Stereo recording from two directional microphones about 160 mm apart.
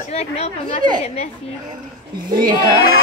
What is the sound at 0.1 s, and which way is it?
Speech, 40° left (ahead or behind).